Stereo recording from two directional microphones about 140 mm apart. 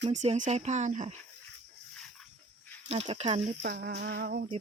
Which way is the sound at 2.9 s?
45° right (ahead or behind).